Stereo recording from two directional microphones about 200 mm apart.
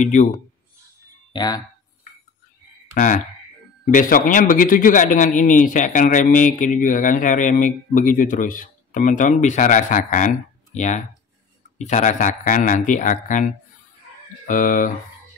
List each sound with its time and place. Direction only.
0.0 s a man's voice: 35° left (ahead or behind)
1.3 s speech: 20° left (ahead or behind)
2.9 s a man's voice: 40° left (ahead or behind)